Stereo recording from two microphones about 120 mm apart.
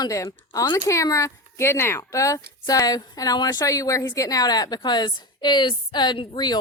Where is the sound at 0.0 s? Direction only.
30° left (ahead or behind).